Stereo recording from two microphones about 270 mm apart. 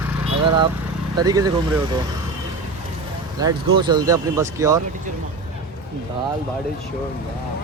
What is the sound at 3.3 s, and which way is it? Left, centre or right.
Speech, centre.